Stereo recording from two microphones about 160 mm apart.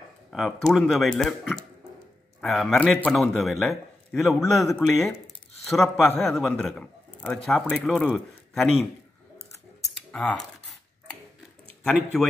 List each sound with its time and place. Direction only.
0.3 s speech: centre (ahead or behind)
4.4 s a man's voice: 15° left (ahead or behind)
5.7 s a man's voice: centre (ahead or behind)
8.1 s a man's voice: 5° right (ahead or behind)
10.1 s speech: 5° left (ahead or behind)
11.8 s speech: centre (ahead or behind)